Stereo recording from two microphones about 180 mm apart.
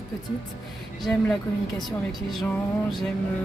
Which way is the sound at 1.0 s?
Centre (ahead or behind).